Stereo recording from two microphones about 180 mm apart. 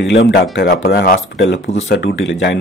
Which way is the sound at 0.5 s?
60° left (ahead or behind).